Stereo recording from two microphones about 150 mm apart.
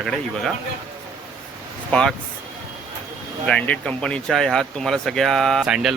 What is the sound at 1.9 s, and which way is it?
Speech, 5° left (ahead or behind).